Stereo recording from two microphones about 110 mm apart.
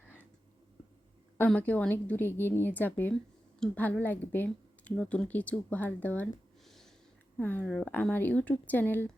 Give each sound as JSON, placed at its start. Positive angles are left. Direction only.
{"t": 1.5, "sound": "a woman's voice", "side_deg": 15}
{"t": 6.7, "sound": "snort", "side_deg": 0}
{"t": 7.3, "sound": "a woman's voice", "side_deg": 15}